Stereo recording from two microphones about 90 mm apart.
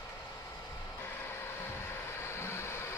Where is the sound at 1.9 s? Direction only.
30° left (ahead or behind).